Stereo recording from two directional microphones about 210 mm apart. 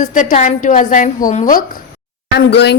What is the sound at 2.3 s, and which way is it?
Speech, 55° left (ahead or behind).